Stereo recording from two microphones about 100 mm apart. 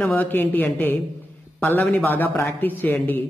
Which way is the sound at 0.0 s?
15° left (ahead or behind).